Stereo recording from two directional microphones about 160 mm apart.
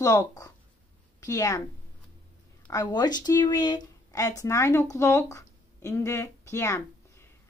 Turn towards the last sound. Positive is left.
turn(degrees=15)  # may be behind; listen again after turning